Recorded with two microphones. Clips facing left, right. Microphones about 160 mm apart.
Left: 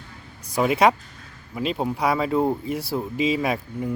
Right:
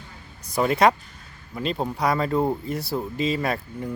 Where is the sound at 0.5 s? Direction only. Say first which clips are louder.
Left 1 dB; 10° left (ahead or behind).